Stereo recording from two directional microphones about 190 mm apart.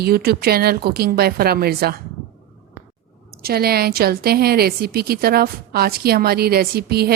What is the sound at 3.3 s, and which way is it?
A woman's voice, 55° right (ahead or behind).